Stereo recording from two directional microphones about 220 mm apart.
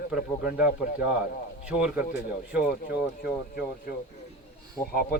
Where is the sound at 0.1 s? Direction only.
5° right (ahead or behind).